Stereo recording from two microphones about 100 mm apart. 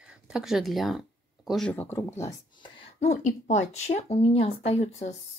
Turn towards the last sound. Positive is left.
turn(degrees=90)